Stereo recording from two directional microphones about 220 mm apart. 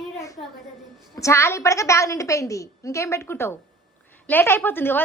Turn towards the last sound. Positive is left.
turn(degrees=10)  # may be behind; listen again after turning